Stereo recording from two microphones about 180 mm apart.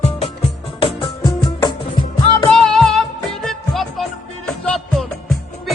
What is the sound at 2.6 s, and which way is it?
Music, 5° left (ahead or behind).